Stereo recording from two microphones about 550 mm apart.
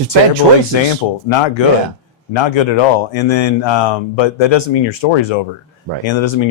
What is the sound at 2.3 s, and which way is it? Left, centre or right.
Speech, left.